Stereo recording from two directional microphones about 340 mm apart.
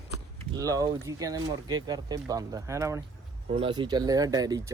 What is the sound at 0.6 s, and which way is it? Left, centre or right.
Speech, centre.